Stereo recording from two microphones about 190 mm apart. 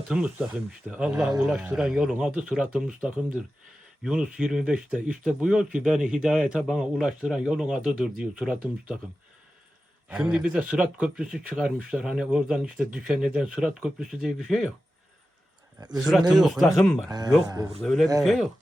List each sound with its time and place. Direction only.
0.1 s speech: 5° right (ahead or behind)
10.1 s speech: 5° right (ahead or behind)
16.3 s speech: centre (ahead or behind)
17.1 s speech: 20° right (ahead or behind)
17.8 s speech: centre (ahead or behind)